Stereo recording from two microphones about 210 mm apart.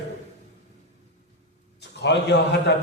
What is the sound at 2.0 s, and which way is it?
Speech, 55° left (ahead or behind).